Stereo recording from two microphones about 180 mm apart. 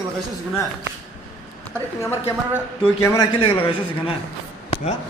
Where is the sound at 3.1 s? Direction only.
30° left (ahead or behind).